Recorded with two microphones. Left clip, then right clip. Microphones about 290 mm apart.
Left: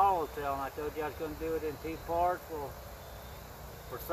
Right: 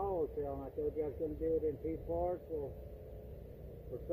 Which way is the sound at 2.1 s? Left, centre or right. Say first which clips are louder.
Left 8 dB; left.